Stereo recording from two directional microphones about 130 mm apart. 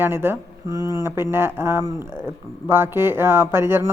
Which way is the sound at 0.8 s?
30° left (ahead or behind).